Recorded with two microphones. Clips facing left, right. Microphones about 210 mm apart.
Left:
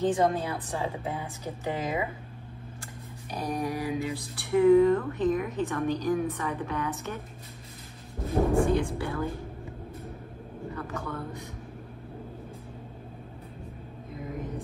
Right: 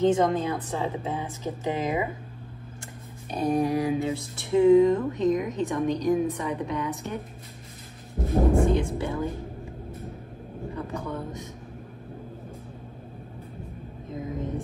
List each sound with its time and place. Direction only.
0.0 s speech: 20° right (ahead or behind)
3.3 s a sound: 25° right (ahead or behind)
8.3 s speech: 20° right (ahead or behind)
10.8 s speech: 20° right (ahead or behind)